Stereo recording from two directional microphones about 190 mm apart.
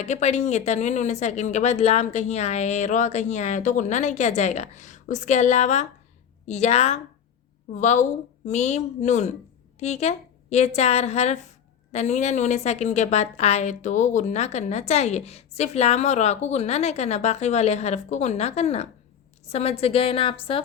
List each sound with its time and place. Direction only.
0.0 s a woman's voice: 35° left (ahead or behind)